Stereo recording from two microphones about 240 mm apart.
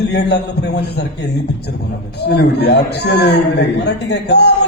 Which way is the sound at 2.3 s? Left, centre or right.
Left.